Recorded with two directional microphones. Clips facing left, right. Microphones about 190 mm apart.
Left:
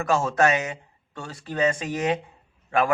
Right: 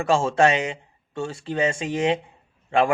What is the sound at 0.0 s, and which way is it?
A man's voice, 30° right (ahead or behind).